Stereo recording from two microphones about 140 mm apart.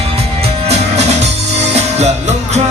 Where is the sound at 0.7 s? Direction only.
50° right (ahead or behind).